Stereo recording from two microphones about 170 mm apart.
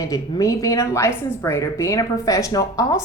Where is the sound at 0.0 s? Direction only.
20° left (ahead or behind).